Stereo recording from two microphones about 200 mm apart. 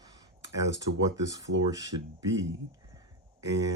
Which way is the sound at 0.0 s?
20° right (ahead or behind).